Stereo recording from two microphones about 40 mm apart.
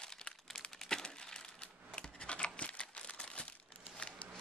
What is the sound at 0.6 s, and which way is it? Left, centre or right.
Crumpling, centre.